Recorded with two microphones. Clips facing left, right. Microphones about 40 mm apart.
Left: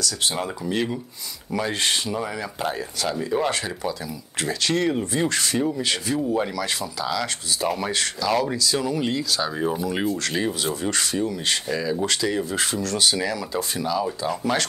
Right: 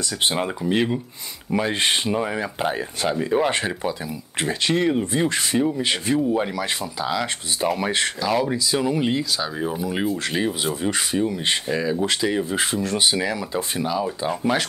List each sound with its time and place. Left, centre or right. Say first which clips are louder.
0.0 s speech: right 3 dB; right
8.3 s speech: left 1 dB; centre
9.4 s speech: left 1 dB; centre; by 14.0 s right
14.5 s speech: even; centre